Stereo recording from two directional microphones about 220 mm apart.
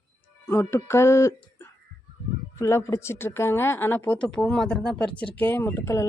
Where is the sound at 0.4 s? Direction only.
10° left (ahead or behind).